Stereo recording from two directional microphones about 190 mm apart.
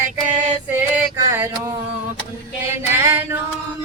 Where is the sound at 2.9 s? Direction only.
15° right (ahead or behind).